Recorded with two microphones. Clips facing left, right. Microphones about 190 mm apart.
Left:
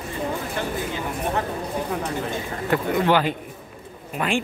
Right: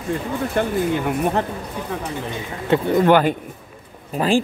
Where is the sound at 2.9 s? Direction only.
50° right (ahead or behind).